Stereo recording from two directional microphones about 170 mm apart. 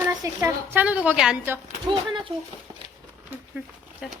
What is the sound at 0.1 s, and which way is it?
A woman's voice, 20° right (ahead or behind).